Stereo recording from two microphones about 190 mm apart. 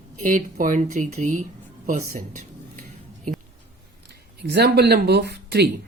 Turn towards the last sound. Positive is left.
turn(degrees=-60)  # may be behind; listen again after turning